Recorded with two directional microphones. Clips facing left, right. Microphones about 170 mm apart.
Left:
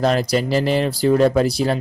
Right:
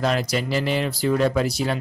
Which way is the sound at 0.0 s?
40° left (ahead or behind).